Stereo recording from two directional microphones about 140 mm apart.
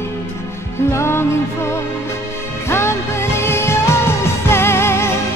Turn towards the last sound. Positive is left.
turn(degrees=20)  # may be behind; listen again after turning